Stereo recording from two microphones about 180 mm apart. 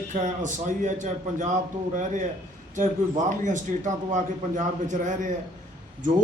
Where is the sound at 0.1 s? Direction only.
40° right (ahead or behind).